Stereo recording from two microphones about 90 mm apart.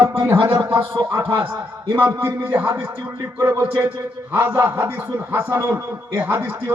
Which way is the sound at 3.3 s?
35° right (ahead or behind).